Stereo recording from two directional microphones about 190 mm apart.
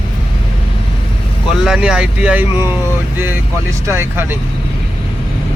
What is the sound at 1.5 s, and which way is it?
Speech, 5° right (ahead or behind).